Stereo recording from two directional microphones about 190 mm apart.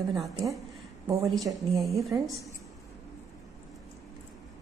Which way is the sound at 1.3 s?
Centre (ahead or behind).